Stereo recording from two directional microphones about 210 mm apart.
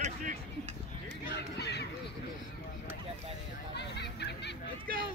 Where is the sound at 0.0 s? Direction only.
35° right (ahead or behind).